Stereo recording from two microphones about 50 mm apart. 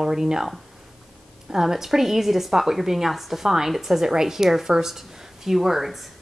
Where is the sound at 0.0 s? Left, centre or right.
Centre.